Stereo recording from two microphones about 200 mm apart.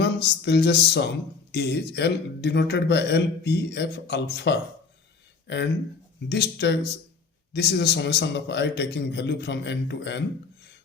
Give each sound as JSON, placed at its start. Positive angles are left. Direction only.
{"t": 0.0, "sound": "a man's voice", "side_deg": 55}
{"t": 6.2, "sound": "a man's voice", "side_deg": 60}